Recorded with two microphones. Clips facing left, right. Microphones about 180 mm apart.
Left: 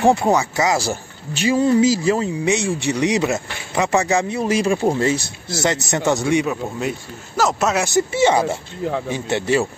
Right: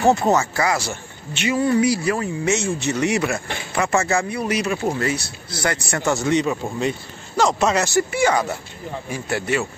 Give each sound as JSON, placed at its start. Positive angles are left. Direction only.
{"t": 0.0, "sound": "speech", "side_deg": 10}
{"t": 0.7, "sound": "speech", "side_deg": 35}
{"t": 1.6, "sound": "a man's voice", "side_deg": 20}
{"t": 7.8, "sound": "speech", "side_deg": 20}